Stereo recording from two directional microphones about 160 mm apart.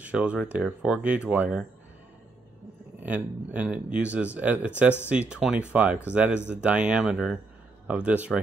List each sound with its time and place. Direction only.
0.0 s speech: 10° right (ahead or behind)
3.0 s speech: 10° right (ahead or behind)